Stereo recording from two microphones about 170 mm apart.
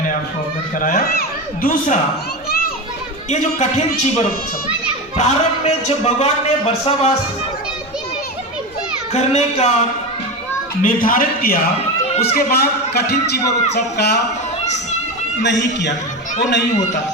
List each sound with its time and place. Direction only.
0.8 s a man's voice: 50° left (ahead or behind)
3.2 s a man's voice: 40° left (ahead or behind)
9.1 s a man's voice: 40° left (ahead or behind)
10.8 s a man's voice: 55° left (ahead or behind); by 14.2 s 75° left (ahead or behind)
15.4 s a man's voice: 90° left